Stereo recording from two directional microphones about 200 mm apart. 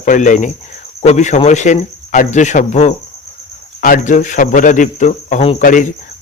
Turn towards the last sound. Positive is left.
turn(degrees=40)  # may be behind; listen again after turning